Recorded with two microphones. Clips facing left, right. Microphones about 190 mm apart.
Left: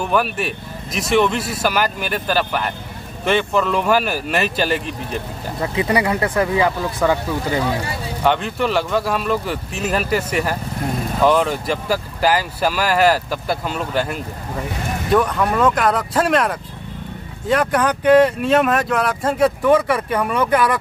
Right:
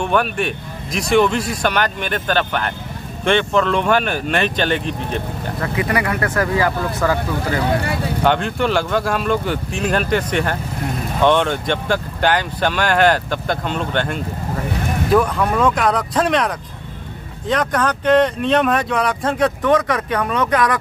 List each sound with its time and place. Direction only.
0.0 s speech: 5° left (ahead or behind)
5.6 s speech: 20° left (ahead or behind)
8.2 s speech: centre (ahead or behind)